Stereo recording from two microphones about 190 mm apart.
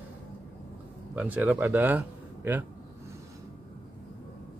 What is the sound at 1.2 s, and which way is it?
Speech, 10° right (ahead or behind).